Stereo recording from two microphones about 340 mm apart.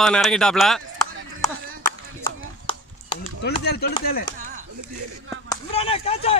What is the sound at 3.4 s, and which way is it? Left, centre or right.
Speech, left.